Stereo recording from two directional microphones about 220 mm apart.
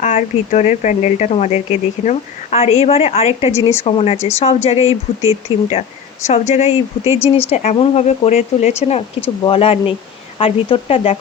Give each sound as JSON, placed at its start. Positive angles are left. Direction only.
{"t": 0.0, "sound": "speech", "side_deg": 35}
{"t": 3.5, "sound": "speech", "side_deg": 15}
{"t": 3.8, "sound": "speech", "side_deg": 30}